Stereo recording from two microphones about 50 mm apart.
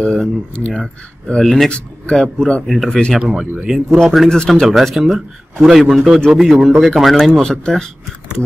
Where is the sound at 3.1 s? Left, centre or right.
Centre.